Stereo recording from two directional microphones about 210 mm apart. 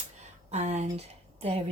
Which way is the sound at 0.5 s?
30° right (ahead or behind).